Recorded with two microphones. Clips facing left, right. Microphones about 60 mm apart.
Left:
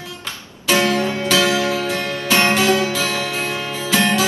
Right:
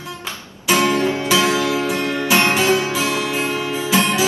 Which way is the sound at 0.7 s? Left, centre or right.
Right.